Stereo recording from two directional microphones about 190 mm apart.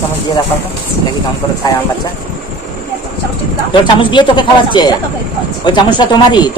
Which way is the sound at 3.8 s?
25° left (ahead or behind).